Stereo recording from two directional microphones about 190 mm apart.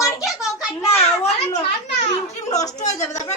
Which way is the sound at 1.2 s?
35° left (ahead or behind).